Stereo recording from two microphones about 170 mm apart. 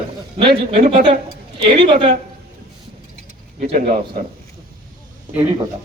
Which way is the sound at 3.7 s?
50° right (ahead or behind).